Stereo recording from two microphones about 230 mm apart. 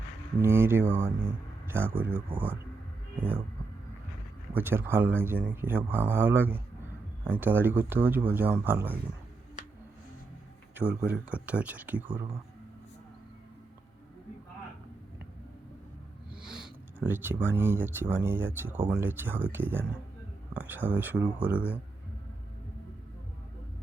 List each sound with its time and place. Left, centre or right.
0.4 s speech: centre
4.5 s speech: centre
10.8 s speech: centre
12.1 s speech: right
16.6 s speech: centre